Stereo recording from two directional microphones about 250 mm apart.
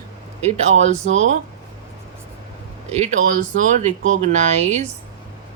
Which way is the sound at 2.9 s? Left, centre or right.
Right.